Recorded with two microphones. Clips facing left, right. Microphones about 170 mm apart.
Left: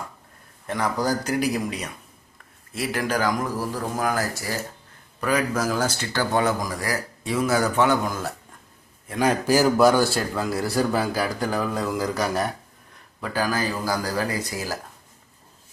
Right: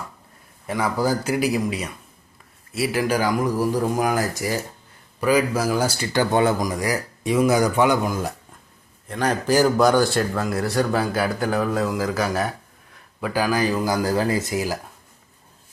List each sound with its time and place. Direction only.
0.7 s a man's voice: 10° right (ahead or behind)
6.3 s a man's voice: 25° right (ahead or behind)
9.0 s a man's voice: 10° left (ahead or behind)
13.2 s speech: 15° right (ahead or behind)